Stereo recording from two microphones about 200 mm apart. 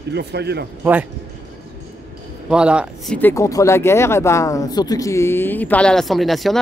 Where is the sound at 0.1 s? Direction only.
55° right (ahead or behind).